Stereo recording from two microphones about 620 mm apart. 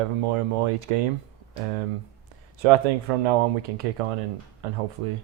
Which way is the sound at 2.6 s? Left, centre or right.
Right.